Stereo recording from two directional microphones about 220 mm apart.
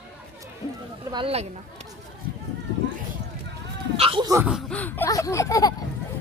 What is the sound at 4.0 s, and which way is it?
Speech, 25° right (ahead or behind).